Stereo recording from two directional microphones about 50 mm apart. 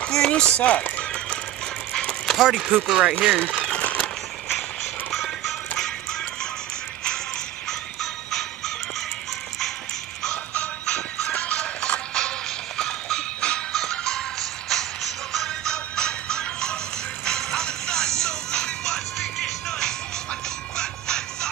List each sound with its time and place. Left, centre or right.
0.0 s a sound: centre
0.3 s speech: left
2.3 s speech: centre
3.3 s a sound: centre
5.1 s music: centre
8.0 s music: centre
10.3 s music: left
12.1 s music: centre
19.1 s music: centre
20.7 s music: centre